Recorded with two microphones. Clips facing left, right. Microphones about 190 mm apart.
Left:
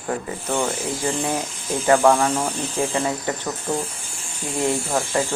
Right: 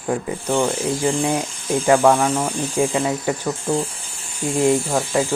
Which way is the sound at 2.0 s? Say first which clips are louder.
Right 1 dB; 5° right (ahead or behind).